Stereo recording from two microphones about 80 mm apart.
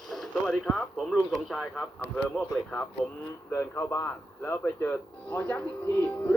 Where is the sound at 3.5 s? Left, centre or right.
Left.